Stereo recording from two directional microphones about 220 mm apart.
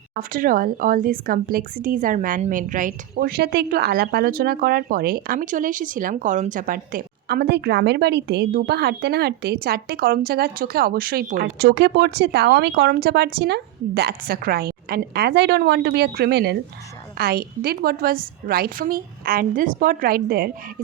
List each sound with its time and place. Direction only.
0.2 s a woman's voice: 40° right (ahead or behind)